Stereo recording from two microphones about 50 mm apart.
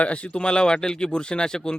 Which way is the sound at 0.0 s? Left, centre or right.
Left.